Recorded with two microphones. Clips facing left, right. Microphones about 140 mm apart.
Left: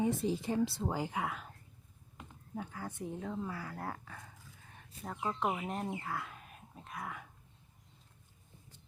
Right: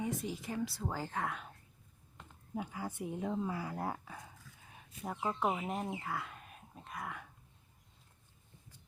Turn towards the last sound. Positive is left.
turn(degrees=0)  # may be behind; listen again after turning